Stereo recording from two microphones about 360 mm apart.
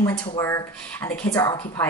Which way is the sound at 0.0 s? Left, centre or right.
Centre.